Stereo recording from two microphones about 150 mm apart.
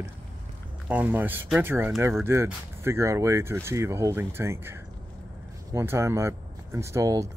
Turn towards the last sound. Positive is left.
turn(degrees=-20)  # may be behind; listen again after turning